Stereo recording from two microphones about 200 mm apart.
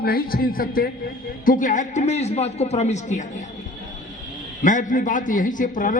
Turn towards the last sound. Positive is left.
turn(degrees=40)  # may be behind; listen again after turning